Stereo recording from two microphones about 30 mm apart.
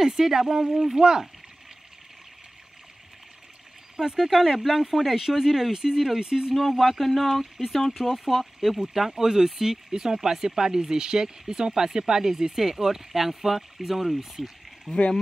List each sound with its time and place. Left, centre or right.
0.0 s speech: centre
3.9 s speech: right
4.3 s speech: centre; by 6.5 s right
6.7 s speech: centre
9.1 s speech: centre
14.9 s speech: centre